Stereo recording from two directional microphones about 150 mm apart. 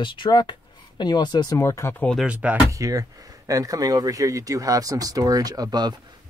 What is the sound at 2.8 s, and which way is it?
Speech, 20° right (ahead or behind).